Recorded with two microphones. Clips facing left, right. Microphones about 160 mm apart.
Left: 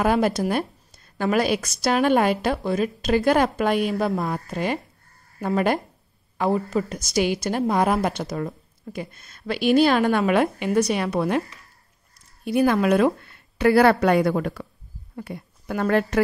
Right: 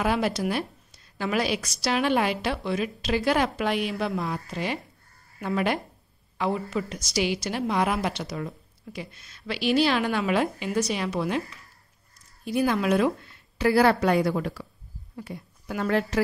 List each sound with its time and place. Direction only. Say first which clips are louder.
0.0 s a woman's voice: left 5 dB; 45° left (ahead or behind)
12.4 s a woman's voice: left 5 dB; 55° left (ahead or behind)